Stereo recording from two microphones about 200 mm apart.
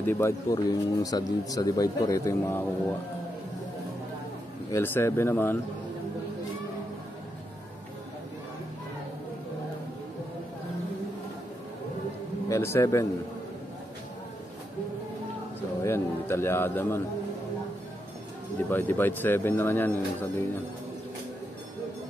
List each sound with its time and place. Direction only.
0.0 s speech: 15° left (ahead or behind)
4.7 s speech: 10° left (ahead or behind)
12.4 s a man's voice: 15° left (ahead or behind)
15.8 s speech: 10° left (ahead or behind)
18.7 s speech: 10° left (ahead or behind)